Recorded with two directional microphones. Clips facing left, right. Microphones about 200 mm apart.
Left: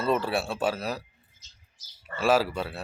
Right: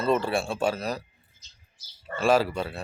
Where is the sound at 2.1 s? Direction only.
5° left (ahead or behind).